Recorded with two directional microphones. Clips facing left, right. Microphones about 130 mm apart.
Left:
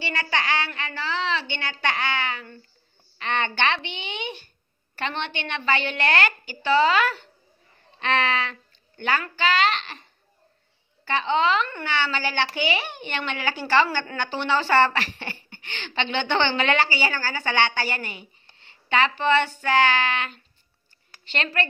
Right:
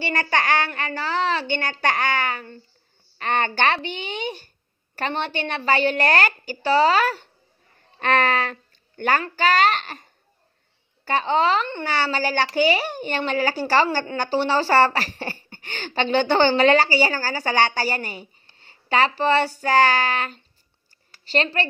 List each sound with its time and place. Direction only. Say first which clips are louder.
0.0 s a woman's voice: right 4 dB; 50° right (ahead or behind)
11.1 s speech: right 2 dB; 40° right (ahead or behind)